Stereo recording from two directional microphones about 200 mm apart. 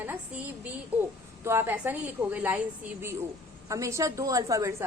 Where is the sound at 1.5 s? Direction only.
10° right (ahead or behind).